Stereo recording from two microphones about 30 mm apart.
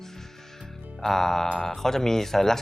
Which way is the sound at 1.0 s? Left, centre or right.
Centre.